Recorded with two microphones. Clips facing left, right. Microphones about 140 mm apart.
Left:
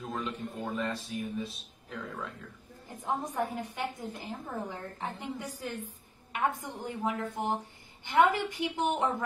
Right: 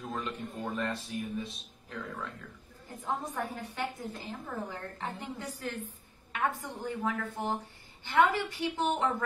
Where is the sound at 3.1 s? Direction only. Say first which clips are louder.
Left 3 dB; 15° left (ahead or behind).